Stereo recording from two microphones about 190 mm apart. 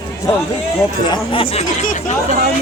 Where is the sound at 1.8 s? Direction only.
45° left (ahead or behind).